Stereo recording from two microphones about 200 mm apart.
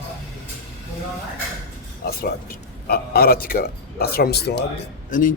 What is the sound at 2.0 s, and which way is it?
A man's voice, 50° left (ahead or behind).